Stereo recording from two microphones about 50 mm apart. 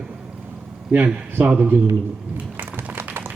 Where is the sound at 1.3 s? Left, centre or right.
Right.